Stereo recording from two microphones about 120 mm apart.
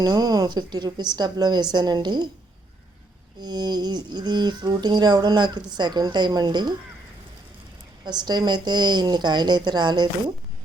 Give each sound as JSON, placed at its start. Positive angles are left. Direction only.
{"t": 0.0, "sound": "a woman's voice", "side_deg": -35}
{"t": 3.4, "sound": "a woman's voice", "side_deg": -35}
{"t": 8.0, "sound": "a woman's voice", "side_deg": -35}